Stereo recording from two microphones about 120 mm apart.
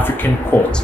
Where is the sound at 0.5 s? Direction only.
15° left (ahead or behind).